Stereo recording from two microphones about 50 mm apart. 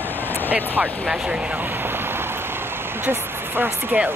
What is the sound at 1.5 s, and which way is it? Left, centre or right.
Rain on surface, right.